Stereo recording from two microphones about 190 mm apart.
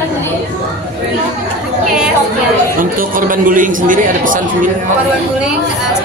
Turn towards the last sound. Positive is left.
turn(degrees=-45)  # may be behind; listen again after turning